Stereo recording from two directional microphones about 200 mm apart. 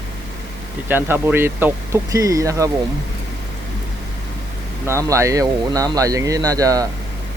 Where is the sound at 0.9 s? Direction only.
10° right (ahead or behind).